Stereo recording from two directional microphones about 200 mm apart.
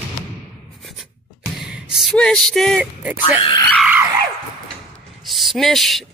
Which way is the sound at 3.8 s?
10° right (ahead or behind).